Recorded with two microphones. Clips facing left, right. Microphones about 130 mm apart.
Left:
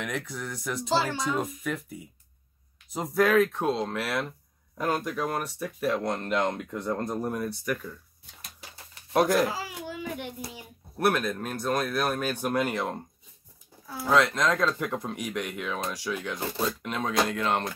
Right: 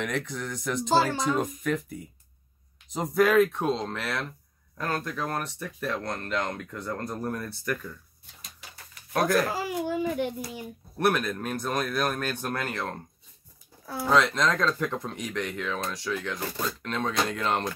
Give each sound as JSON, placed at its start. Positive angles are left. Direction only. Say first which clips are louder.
{"t": 0.0, "sound": "speech", "louder": "right 2 dB", "side_deg": 0}
{"t": 0.8, "sound": "speech", "louder": "right 3 dB", "side_deg": -45}
{"t": 1.2, "sound": "speech", "louder": "right 2 dB", "side_deg": 0}
{"t": 8.7, "sound": "a sound", "louder": "left 4 dB", "side_deg": 25}
{"t": 9.5, "sound": "a sound", "louder": "right 6 dB", "side_deg": -50}
{"t": 11.0, "sound": "speech", "louder": "even", "side_deg": 0}
{"t": 14.0, "sound": "speech", "louder": "even", "side_deg": 5}